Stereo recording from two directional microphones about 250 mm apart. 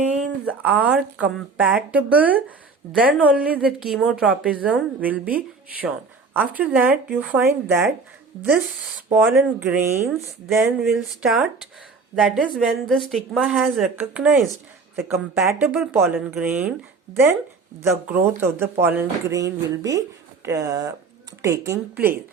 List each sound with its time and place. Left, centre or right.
0.1 s a woman's voice: centre
9.1 s a woman's voice: centre
18.0 s speech: centre